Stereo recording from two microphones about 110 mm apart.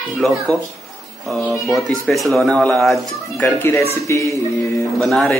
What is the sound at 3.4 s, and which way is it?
Speech, 20° left (ahead or behind).